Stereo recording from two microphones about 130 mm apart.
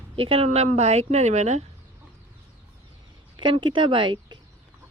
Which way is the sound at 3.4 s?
40° right (ahead or behind).